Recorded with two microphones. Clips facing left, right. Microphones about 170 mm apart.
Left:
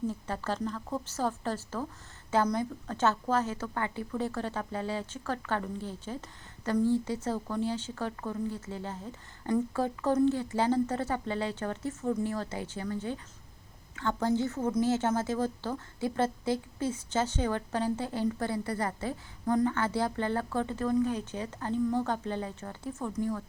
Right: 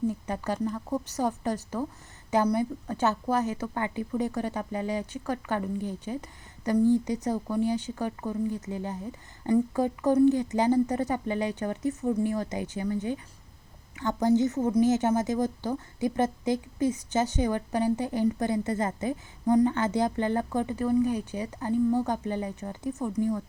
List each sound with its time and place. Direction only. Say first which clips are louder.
0.1 s a woman's voice: right 3 dB; 15° right (ahead or behind)